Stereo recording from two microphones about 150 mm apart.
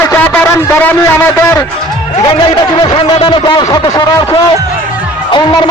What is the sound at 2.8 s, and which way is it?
A man's voice, 30° left (ahead or behind).